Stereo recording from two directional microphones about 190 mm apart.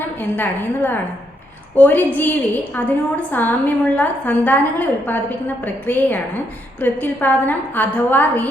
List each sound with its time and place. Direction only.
0.2 s a woman's voice: 10° left (ahead or behind)